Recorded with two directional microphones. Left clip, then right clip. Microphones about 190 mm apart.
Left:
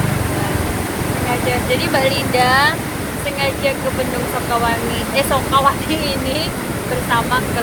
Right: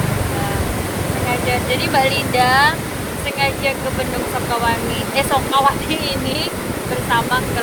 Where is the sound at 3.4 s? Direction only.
15° right (ahead or behind).